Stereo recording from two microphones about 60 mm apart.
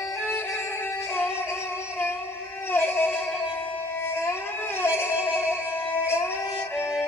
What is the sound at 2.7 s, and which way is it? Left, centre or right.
Music, left.